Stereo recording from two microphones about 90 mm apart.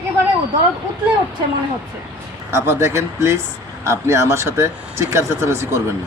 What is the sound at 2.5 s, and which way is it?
Speech, 30° right (ahead or behind).